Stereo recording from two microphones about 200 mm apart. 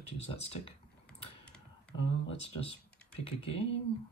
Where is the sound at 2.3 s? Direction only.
30° left (ahead or behind).